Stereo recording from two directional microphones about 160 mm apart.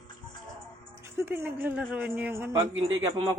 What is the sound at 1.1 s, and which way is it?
Speech, 15° right (ahead or behind).